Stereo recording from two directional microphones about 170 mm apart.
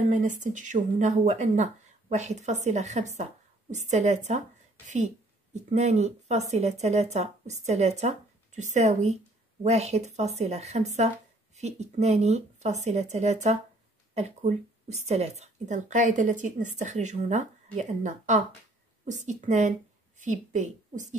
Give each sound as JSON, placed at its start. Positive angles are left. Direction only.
{"t": 0.1, "sound": "a woman's voice", "side_deg": -45}